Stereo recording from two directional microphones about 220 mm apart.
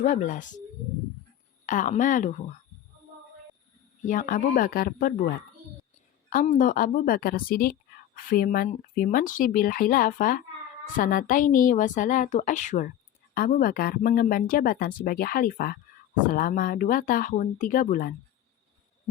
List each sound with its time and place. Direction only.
0.0 s a woman's voice: 35° left (ahead or behind)
1.6 s a woman's voice: 35° left (ahead or behind)
4.0 s a woman's voice: 40° left (ahead or behind)
6.3 s a woman's voice: 35° left (ahead or behind)